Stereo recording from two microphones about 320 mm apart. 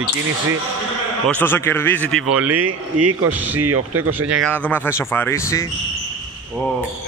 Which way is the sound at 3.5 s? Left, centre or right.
Right.